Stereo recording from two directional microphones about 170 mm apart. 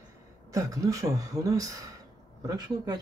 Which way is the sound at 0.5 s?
20° right (ahead or behind).